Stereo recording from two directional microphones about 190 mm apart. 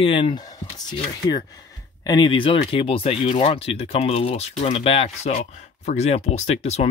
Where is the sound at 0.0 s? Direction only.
30° left (ahead or behind).